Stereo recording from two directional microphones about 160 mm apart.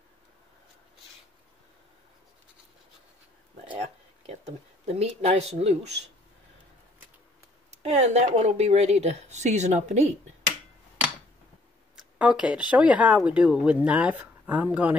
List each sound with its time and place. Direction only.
3.7 s a sound: 40° right (ahead or behind)
7.7 s speech: 45° right (ahead or behind)
12.2 s speech: 5° right (ahead or behind)